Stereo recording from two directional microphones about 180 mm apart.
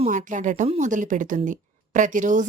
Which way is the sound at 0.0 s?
45° right (ahead or behind).